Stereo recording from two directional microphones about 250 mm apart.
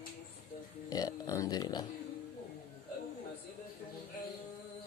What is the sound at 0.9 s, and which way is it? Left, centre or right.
Speech, centre.